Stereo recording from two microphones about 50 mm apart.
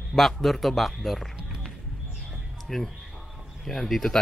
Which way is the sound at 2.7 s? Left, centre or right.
Centre.